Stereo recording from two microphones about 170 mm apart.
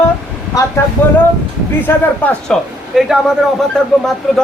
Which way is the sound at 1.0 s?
10° left (ahead or behind).